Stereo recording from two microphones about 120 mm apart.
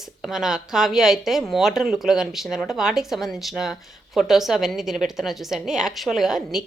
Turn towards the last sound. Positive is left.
turn(degrees=0)  # may be behind; listen again after turning